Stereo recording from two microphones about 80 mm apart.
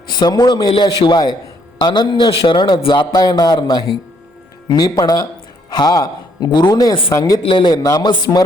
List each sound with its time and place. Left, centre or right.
0.1 s a man's voice: left
7.1 s speech: left
7.4 s a man's voice: left
7.8 s a man's voice: left